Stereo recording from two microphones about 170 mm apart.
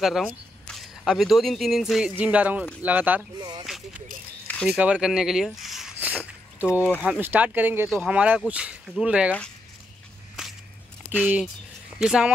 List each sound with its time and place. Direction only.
0.0 s speech: centre (ahead or behind)
3.3 s speech: 25° right (ahead or behind)
4.6 s a sound: 5° right (ahead or behind)
6.7 s speech: 15° left (ahead or behind)
7.0 s speech: 10° right (ahead or behind)
10.4 s whip: centre (ahead or behind)
12.0 s speech: 5° right (ahead or behind)